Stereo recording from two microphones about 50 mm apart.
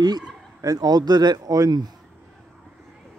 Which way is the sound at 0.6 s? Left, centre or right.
Right.